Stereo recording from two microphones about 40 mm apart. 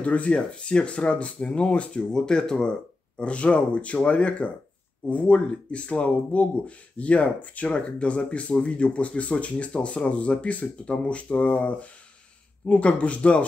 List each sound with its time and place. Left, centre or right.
0.0 s speech: left